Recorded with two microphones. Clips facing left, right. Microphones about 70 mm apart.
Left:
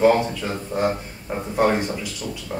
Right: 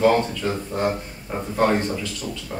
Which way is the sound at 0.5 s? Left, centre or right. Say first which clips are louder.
Even; centre.